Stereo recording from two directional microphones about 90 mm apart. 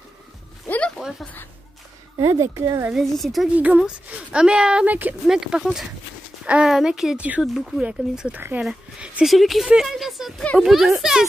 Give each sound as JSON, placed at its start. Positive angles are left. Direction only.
{"t": 0.7, "sound": "a sound", "side_deg": 15}
{"t": 1.2, "sound": "speech", "side_deg": 20}
{"t": 2.1, "sound": "speech", "side_deg": -35}
{"t": 2.9, "sound": "speech", "side_deg": 0}
{"t": 3.5, "sound": "speech", "side_deg": -15}
{"t": 5.2, "sound": "speech", "side_deg": -5}
{"t": 7.8, "sound": "speech", "side_deg": -15}